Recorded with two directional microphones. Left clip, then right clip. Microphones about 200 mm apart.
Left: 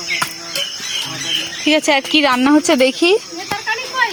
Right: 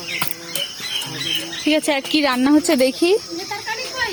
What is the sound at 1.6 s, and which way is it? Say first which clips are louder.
A woman's voice: left 5 dB; centre (ahead or behind).